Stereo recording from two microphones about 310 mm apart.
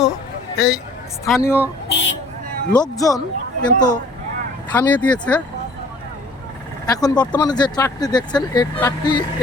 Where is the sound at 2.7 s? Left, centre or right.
Centre.